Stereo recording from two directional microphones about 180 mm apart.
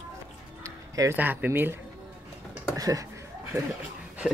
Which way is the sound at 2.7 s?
20° right (ahead or behind).